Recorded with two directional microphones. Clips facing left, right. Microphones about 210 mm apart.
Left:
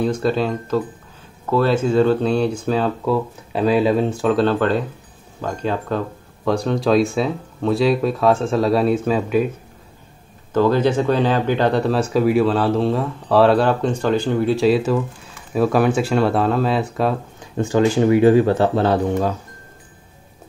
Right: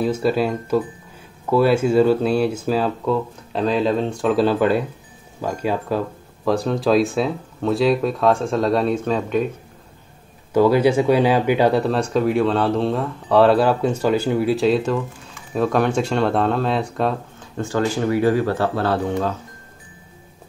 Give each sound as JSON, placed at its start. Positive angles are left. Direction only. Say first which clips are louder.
{"t": 0.0, "sound": "speech", "louder": "even", "side_deg": -5}
{"t": 10.5, "sound": "speech", "louder": "right 1 dB", "side_deg": -10}
{"t": 17.4, "sound": "speech", "louder": "left 6 dB", "side_deg": 15}
{"t": 19.0, "sound": "speech", "louder": "left 2 dB", "side_deg": 10}